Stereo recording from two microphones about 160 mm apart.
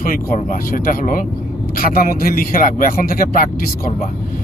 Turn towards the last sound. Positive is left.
turn(degrees=60)  # may be behind; listen again after turning